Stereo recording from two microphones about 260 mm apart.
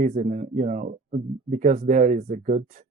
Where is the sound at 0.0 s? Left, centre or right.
Right.